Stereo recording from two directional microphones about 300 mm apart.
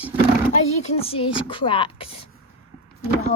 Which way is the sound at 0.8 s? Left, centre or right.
Centre.